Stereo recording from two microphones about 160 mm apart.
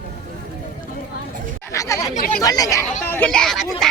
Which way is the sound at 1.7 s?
20° left (ahead or behind).